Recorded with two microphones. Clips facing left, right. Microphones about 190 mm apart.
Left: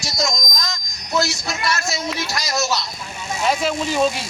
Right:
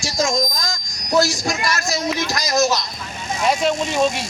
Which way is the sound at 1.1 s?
35° right (ahead or behind).